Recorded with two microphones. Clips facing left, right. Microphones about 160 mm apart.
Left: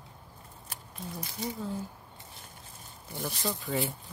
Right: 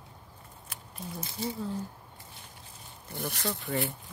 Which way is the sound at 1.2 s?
30° right (ahead or behind).